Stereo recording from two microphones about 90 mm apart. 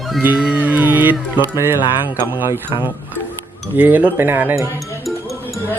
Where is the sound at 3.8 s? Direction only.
20° right (ahead or behind).